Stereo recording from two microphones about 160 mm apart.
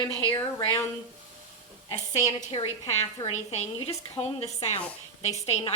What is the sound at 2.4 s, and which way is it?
A woman's voice, 40° left (ahead or behind).